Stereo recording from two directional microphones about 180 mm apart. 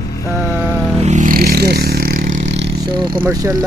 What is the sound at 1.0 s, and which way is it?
Vehicle, 40° right (ahead or behind).